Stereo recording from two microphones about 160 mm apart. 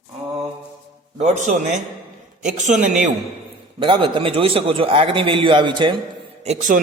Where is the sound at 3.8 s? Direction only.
30° right (ahead or behind).